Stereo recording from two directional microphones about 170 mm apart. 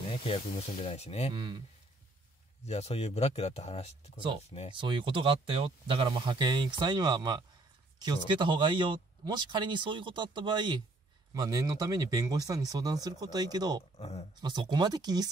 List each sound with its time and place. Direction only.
0.1 s speech: 35° left (ahead or behind)
1.3 s speech: 30° right (ahead or behind)
2.6 s speech: 40° left (ahead or behind)
4.7 s speech: 30° right (ahead or behind)
13.9 s speech: 40° left (ahead or behind)
14.4 s speech: 25° right (ahead or behind)